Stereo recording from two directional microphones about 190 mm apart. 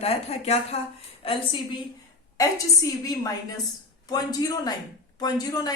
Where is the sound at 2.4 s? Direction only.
20° left (ahead or behind).